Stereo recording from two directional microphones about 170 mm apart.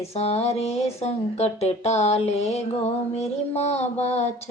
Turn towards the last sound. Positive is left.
turn(degrees=40)  # may be behind; listen again after turning